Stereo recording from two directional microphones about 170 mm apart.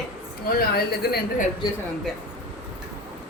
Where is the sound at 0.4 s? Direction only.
65° left (ahead or behind).